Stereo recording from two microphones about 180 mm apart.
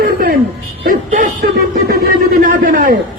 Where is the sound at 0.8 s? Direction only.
45° right (ahead or behind).